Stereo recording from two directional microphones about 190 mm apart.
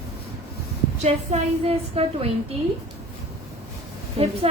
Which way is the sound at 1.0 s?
35° right (ahead or behind).